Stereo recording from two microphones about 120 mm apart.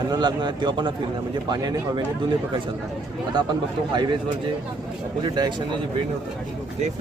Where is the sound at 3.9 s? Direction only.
40° right (ahead or behind).